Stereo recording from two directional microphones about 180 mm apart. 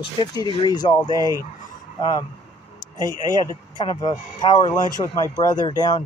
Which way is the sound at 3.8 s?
25° left (ahead or behind).